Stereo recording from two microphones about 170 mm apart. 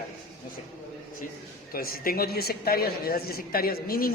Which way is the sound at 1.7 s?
60° left (ahead or behind).